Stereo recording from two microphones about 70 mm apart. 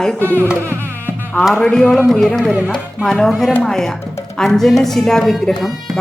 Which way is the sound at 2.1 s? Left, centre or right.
Centre.